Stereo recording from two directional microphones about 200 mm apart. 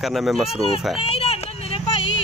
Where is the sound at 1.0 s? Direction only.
30° left (ahead or behind).